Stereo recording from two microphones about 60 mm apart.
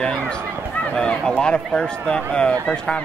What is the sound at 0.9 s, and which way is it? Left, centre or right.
Speech, centre.